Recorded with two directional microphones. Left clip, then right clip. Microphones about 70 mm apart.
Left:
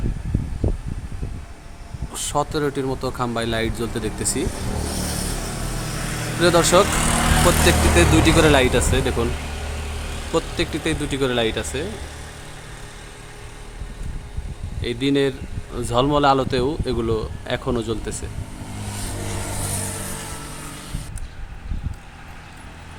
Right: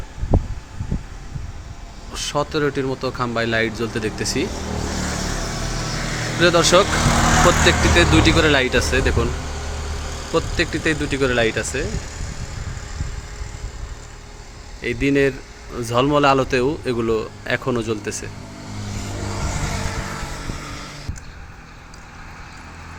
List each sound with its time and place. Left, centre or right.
2.3 s speech: left
4.7 s vehicle: centre
5.4 s vehicle: centre
6.4 s speech: centre
6.8 s speech: centre
7.1 s vehicle: centre
7.6 s speech: centre
10.3 s speech: left
14.8 s speech: centre
18.9 s vehicle: centre